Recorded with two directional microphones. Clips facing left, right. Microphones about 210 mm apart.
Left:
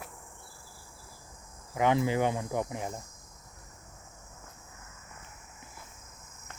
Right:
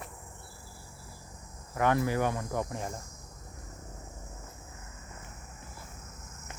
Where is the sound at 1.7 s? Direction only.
20° left (ahead or behind).